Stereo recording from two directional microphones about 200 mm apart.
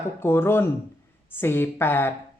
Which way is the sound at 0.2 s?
10° left (ahead or behind).